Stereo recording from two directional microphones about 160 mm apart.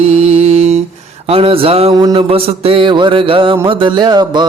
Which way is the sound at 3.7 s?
30° right (ahead or behind).